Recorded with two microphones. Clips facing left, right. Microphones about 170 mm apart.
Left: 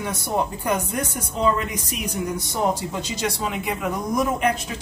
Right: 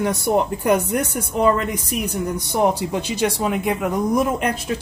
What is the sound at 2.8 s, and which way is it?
Speech, 60° right (ahead or behind).